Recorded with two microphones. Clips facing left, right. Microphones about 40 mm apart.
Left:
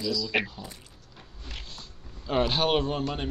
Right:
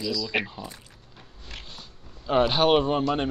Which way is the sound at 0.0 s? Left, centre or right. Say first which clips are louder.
Even; centre.